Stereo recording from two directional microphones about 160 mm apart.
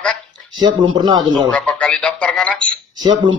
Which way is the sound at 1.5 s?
5° left (ahead or behind).